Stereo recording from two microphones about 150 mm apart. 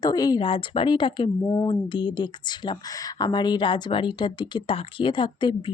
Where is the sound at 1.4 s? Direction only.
20° left (ahead or behind).